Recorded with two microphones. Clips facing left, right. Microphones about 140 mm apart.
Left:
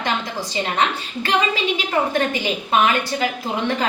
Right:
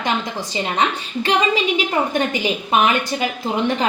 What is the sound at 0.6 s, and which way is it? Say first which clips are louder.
A woman's voice: right 1 dB; 15° right (ahead or behind).